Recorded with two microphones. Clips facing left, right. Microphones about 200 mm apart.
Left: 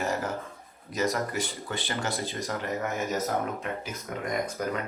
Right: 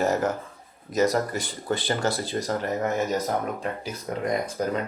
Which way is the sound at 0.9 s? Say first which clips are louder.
Right 5 dB; 35° right (ahead or behind).